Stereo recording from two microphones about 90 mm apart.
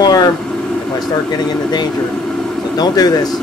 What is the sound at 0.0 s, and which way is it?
Vehicle, 45° left (ahead or behind).